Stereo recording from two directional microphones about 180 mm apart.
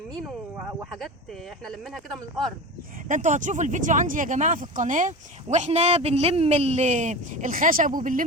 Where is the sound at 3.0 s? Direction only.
45° right (ahead or behind).